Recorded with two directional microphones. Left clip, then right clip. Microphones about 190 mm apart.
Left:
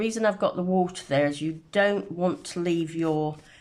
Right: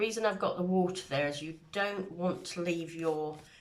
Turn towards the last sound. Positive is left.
turn(degrees=40)  # may be behind; listen again after turning